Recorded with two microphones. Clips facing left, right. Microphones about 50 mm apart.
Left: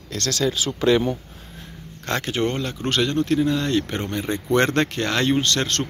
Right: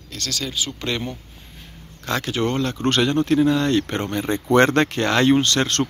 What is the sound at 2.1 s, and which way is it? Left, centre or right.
Speech, left.